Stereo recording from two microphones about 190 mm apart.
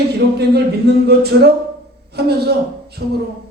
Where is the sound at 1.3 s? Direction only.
70° right (ahead or behind).